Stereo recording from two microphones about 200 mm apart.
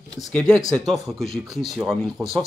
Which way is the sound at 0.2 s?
5° left (ahead or behind).